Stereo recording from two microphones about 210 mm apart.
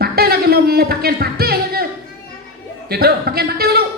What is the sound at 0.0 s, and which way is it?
Music, 45° right (ahead or behind).